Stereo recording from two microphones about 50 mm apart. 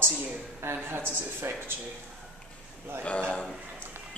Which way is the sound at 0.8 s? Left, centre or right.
Right.